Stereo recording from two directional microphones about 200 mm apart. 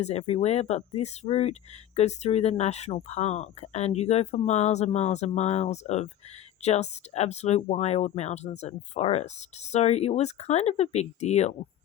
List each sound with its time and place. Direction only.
0.0 s speech: 30° left (ahead or behind)